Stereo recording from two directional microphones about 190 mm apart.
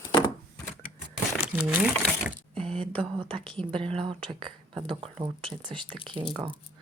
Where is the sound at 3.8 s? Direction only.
30° right (ahead or behind).